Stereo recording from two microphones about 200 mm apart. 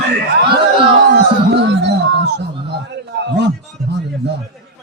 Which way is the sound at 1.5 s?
60° right (ahead or behind).